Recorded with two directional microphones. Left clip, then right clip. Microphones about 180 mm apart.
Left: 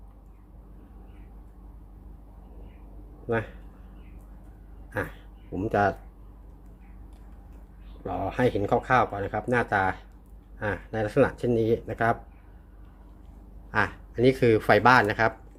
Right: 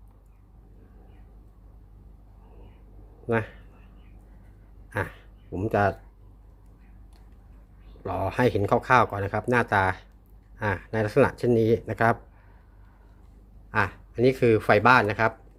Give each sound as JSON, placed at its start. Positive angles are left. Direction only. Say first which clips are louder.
{"t": 3.2, "sound": "speech", "louder": "right 2 dB", "side_deg": -30}
{"t": 4.9, "sound": "speech", "louder": "right 1 dB", "side_deg": -30}
{"t": 8.0, "sound": "speech", "louder": "right 1 dB", "side_deg": -40}
{"t": 13.7, "sound": "speech", "louder": "even", "side_deg": -20}